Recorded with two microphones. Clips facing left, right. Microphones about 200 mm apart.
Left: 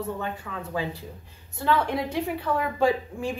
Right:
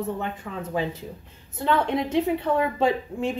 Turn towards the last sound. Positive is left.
turn(degrees=-25)  # may be behind; listen again after turning